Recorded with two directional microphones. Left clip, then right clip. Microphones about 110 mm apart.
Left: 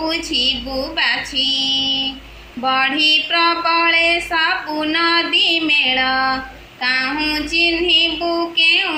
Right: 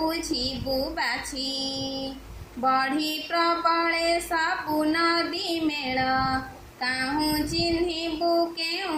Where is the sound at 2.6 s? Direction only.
35° right (ahead or behind).